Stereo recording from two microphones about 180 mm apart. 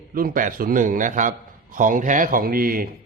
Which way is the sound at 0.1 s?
50° right (ahead or behind).